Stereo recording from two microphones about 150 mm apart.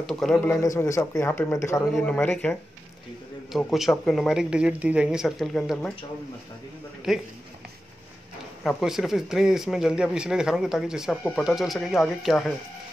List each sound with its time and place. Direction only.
0.0 s speech: centre (ahead or behind)
0.6 s a man's voice: 20° left (ahead or behind)
1.9 s speech: 5° left (ahead or behind)
3.5 s speech: centre (ahead or behind)
7.1 s speech: centre (ahead or behind)
8.6 s speech: centre (ahead or behind)